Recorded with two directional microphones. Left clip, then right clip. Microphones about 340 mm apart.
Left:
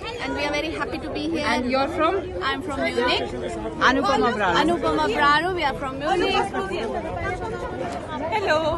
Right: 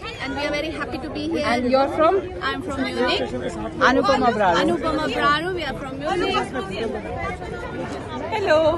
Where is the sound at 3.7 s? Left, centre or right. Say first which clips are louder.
Right 2 dB; centre.